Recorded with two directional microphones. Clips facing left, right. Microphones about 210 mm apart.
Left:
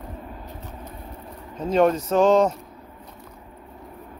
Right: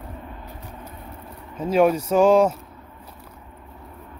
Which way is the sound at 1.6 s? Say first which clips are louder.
Right 1 dB; 10° right (ahead or behind).